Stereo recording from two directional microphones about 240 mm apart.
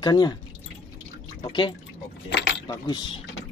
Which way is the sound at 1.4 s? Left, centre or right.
Centre.